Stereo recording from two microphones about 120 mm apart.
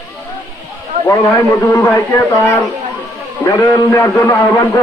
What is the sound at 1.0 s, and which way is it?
Speech, 25° left (ahead or behind).